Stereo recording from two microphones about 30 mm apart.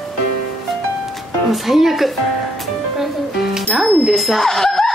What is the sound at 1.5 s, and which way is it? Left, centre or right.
Speech, centre.